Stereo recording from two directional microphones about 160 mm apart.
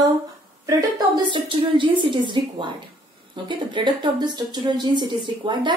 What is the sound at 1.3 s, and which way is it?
A woman's voice, 30° right (ahead or behind).